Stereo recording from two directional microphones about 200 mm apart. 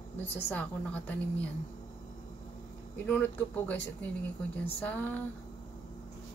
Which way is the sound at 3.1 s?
10° left (ahead or behind).